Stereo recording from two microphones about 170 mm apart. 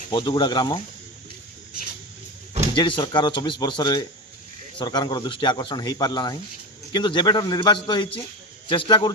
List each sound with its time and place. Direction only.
0.1 s speech: 25° left (ahead or behind)
2.7 s speech: 30° left (ahead or behind)